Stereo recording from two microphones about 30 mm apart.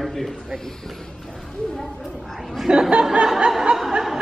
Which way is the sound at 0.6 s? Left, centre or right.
Centre.